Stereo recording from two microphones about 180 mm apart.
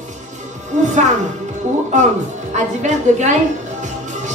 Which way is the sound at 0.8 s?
40° right (ahead or behind).